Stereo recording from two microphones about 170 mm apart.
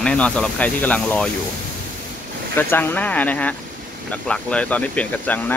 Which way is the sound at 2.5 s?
10° left (ahead or behind).